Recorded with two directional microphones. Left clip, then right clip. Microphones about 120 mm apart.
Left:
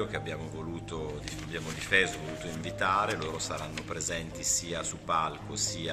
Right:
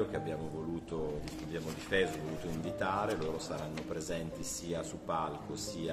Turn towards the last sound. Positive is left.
turn(degrees=-20)  # may be behind; listen again after turning